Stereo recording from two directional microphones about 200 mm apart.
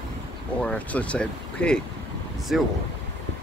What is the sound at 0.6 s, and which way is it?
Speech, 5° left (ahead or behind).